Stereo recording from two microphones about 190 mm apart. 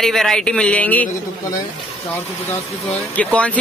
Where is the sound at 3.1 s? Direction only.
5° left (ahead or behind).